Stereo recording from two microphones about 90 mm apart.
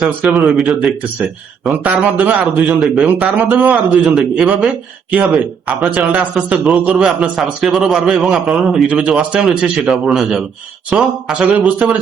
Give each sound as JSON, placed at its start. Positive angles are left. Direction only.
{"t": 0.0, "sound": "speech", "side_deg": -15}
{"t": 0.7, "sound": "a man's voice", "side_deg": 0}
{"t": 1.7, "sound": "speech", "side_deg": -15}
{"t": 5.6, "sound": "a man's voice", "side_deg": -15}